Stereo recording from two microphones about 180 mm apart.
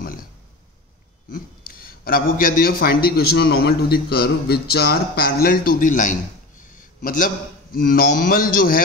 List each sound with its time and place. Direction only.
1.3 s a man's voice: 55° left (ahead or behind)
6.7 s a sound: 50° left (ahead or behind)
7.8 s a man's voice: 55° left (ahead or behind)